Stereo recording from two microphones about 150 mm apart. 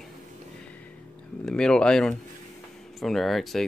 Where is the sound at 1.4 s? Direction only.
5° left (ahead or behind).